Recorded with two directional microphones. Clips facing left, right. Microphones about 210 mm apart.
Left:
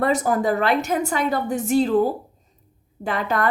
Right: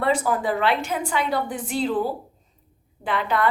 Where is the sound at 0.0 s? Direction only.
45° left (ahead or behind).